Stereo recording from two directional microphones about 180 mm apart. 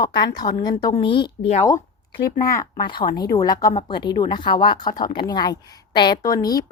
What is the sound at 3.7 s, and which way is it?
A woman's voice, 30° left (ahead or behind).